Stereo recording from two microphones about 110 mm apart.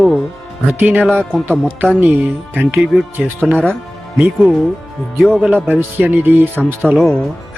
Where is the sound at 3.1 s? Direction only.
15° right (ahead or behind).